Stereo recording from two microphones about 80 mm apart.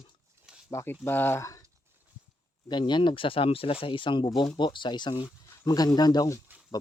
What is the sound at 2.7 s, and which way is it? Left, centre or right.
Speech, left.